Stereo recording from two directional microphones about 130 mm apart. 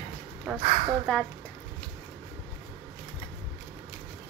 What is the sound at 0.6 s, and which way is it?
Speech, 45° right (ahead or behind).